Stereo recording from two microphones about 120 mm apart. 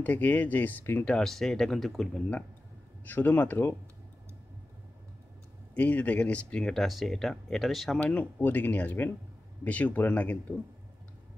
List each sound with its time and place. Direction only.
0.0 s speech: 15° left (ahead or behind)
1.0 s speech: 5° left (ahead or behind)
5.8 s speech: 10° left (ahead or behind)
8.0 s speech: 15° left (ahead or behind)